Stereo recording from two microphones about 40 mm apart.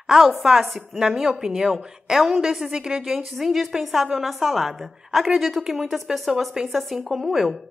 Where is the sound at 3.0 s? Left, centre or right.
Centre.